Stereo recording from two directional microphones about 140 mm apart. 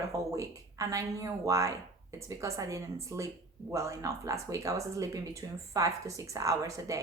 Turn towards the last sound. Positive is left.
turn(degrees=-25)  # may be behind; listen again after turning